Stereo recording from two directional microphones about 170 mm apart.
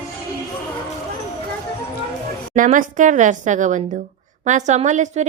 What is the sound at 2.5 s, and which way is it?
A woman's voice, 50° right (ahead or behind).